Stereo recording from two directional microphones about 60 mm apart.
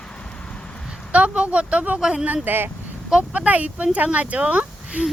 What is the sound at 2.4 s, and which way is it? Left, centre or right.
Speech, right.